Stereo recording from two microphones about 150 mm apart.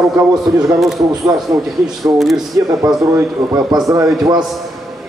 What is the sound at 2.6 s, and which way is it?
A man's voice, 25° right (ahead or behind).